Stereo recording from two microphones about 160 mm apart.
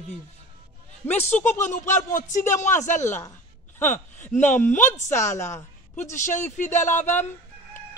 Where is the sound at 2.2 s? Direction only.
50° left (ahead or behind).